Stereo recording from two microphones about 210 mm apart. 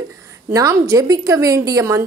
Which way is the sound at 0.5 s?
15° right (ahead or behind).